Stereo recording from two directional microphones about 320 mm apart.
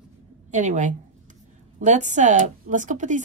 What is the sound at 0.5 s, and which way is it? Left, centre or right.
Speech, right.